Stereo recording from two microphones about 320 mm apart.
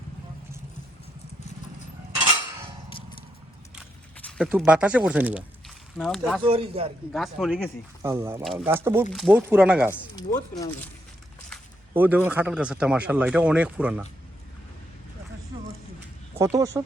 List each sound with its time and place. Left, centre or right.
4.3 s speech: centre
6.4 s speech: centre
7.1 s a man's voice: centre
9.9 s a man's voice: centre
11.5 s a man's voice: centre
16.3 s speech: centre